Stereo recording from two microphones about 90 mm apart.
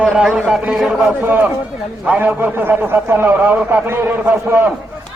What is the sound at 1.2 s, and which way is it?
A man's voice, 20° right (ahead or behind).